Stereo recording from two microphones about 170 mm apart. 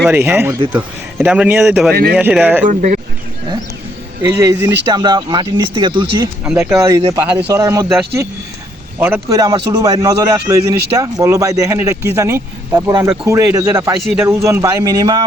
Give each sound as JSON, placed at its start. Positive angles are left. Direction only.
{"t": 0.1, "sound": "speech", "side_deg": -10}
{"t": 1.9, "sound": "speech", "side_deg": -65}
{"t": 2.1, "sound": "speech", "side_deg": -10}
{"t": 2.6, "sound": "speech", "side_deg": -45}
{"t": 4.3, "sound": "a man's voice", "side_deg": -15}
{"t": 6.4, "sound": "a man's voice", "side_deg": -10}
{"t": 9.0, "sound": "a man's voice", "side_deg": -10}
{"t": 14.0, "sound": "a man's voice", "side_deg": 0}
{"t": 14.3, "sound": "a man's voice", "side_deg": -15}